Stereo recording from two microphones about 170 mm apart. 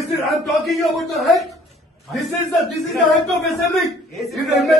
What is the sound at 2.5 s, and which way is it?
A man's voice, centre (ahead or behind).